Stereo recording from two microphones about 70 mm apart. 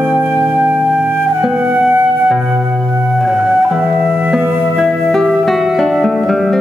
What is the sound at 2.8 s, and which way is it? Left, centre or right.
Music, centre.